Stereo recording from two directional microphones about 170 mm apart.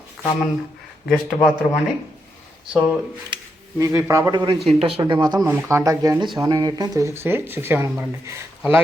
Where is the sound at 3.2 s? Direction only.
25° right (ahead or behind).